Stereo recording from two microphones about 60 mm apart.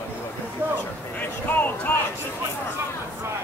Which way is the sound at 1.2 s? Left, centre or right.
Left.